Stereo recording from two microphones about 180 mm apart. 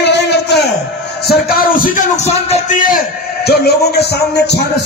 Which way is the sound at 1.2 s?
60° left (ahead or behind).